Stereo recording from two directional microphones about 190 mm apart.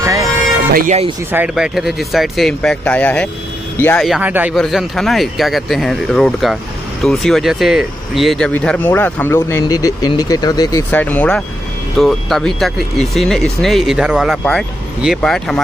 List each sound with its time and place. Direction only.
0.0 s a sound: 15° right (ahead or behind)
0.7 s speech: 40° right (ahead or behind)
1.3 s speech: 5° right (ahead or behind)
4.2 s speech: 10° right (ahead or behind)